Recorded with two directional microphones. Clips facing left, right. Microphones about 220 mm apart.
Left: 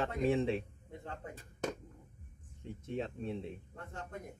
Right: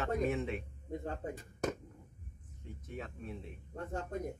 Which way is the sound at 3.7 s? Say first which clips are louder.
Right 7 dB; 40° right (ahead or behind).